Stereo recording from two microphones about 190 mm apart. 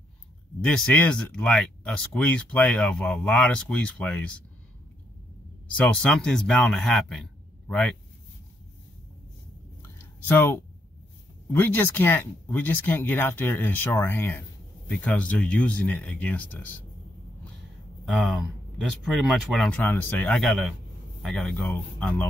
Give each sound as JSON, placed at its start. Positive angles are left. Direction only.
{"t": 0.7, "sound": "speech", "side_deg": 5}
{"t": 5.8, "sound": "speech", "side_deg": 5}
{"t": 9.8, "sound": "a sound", "side_deg": 10}
{"t": 11.4, "sound": "speech", "side_deg": 10}
{"t": 18.3, "sound": "speech", "side_deg": 0}